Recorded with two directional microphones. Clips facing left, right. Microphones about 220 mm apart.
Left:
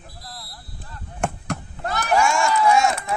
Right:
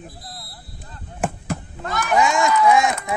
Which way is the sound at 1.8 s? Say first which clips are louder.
Right 1 dB; 35° left (ahead or behind).